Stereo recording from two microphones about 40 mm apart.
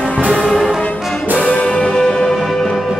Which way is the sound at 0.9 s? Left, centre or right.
Centre.